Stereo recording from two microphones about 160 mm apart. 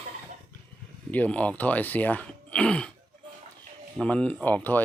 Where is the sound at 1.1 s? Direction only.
10° left (ahead or behind).